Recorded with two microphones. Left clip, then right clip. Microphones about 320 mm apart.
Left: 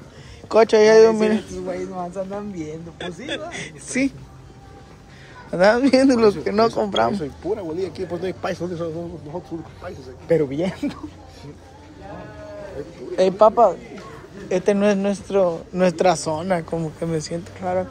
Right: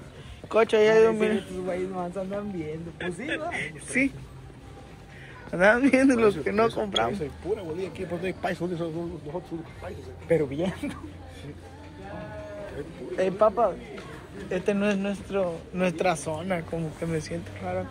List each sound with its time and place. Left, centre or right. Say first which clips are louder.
0.5 s speech: left 7 dB; centre
5.5 s speech: left 5 dB; centre; by 11.0 s left
13.1 s speech: left 8 dB; centre